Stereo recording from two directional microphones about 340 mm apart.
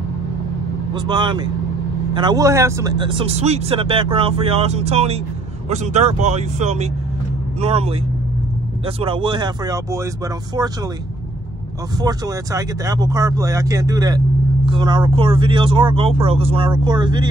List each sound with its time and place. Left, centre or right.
0.9 s speech: centre
12.0 s speech: centre